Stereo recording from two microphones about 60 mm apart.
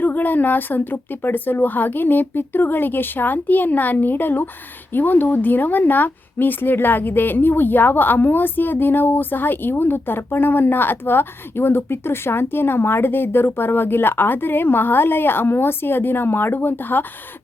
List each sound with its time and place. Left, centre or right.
0.0 s a woman's voice: left